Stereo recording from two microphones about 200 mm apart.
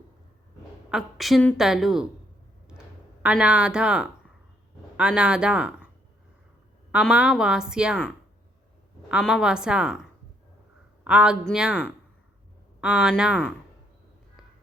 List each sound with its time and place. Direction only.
0.9 s a woman's voice: centre (ahead or behind)
3.2 s a woman's voice: 5° right (ahead or behind)
6.9 s a woman's voice: 5° right (ahead or behind)
9.0 s a woman's voice: 5° right (ahead or behind)